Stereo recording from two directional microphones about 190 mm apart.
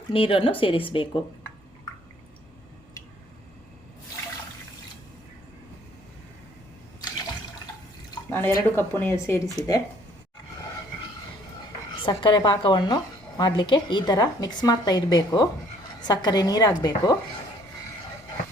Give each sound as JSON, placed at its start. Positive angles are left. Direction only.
{"t": 0.1, "sound": "a woman's voice", "side_deg": 30}
{"t": 8.1, "sound": "speech", "side_deg": 10}
{"t": 12.0, "sound": "a woman's voice", "side_deg": 25}